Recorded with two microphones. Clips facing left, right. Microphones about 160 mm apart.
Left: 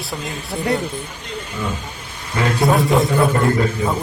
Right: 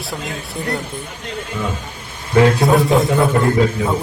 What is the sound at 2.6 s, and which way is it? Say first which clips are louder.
A man's voice: right 2 dB; centre (ahead or behind).